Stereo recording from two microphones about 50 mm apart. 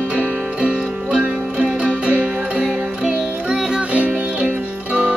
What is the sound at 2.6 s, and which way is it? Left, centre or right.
Music, centre.